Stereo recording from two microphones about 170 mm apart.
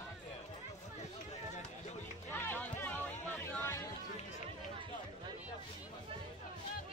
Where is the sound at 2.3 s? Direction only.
10° left (ahead or behind).